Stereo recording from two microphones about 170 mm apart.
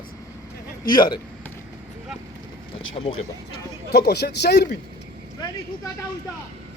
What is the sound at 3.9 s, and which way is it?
Speech, 70° left (ahead or behind).